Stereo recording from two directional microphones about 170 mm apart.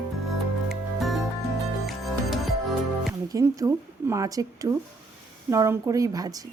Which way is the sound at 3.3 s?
20° right (ahead or behind).